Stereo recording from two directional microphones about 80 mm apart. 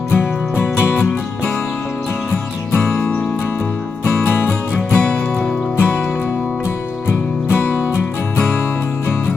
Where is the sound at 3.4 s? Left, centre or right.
Left.